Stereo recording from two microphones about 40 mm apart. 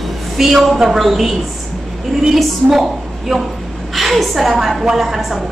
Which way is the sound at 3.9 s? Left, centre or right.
Centre.